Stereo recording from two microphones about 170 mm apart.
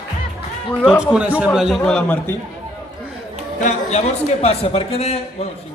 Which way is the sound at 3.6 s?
45° left (ahead or behind).